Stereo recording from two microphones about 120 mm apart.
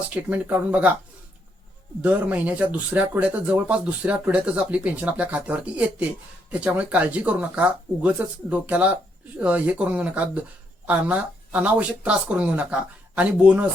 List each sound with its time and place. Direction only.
0.1 s speech: 10° right (ahead or behind)
2.0 s speech: 10° right (ahead or behind)